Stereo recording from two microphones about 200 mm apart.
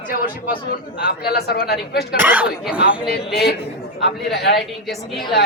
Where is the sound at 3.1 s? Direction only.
55° left (ahead or behind).